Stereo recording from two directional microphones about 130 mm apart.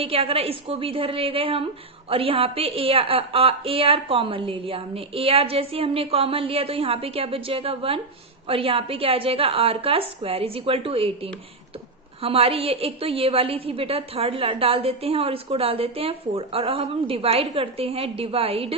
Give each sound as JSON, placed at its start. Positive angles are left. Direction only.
{"t": 0.0, "sound": "a woman's voice", "side_deg": -45}